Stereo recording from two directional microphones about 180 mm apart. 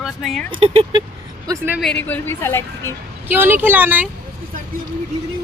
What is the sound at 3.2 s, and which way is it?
Speech, 10° right (ahead or behind).